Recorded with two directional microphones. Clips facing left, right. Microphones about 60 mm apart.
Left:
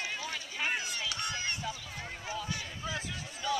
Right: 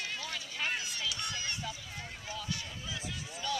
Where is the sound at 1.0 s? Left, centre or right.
Left.